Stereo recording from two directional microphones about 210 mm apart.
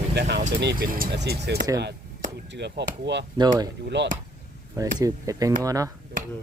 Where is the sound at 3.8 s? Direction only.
55° right (ahead or behind).